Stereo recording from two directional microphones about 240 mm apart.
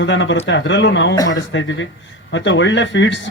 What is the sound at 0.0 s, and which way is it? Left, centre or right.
Speech, left.